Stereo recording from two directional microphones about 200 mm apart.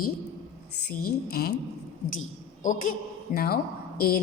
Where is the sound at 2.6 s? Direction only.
40° left (ahead or behind).